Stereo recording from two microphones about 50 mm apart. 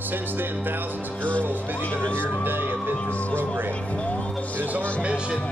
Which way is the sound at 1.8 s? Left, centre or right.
Left.